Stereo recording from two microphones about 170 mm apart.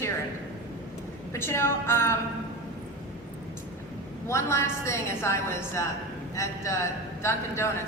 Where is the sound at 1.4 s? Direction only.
15° left (ahead or behind).